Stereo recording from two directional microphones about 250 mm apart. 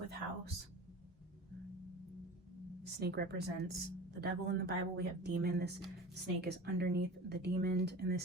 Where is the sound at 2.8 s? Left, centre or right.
Right.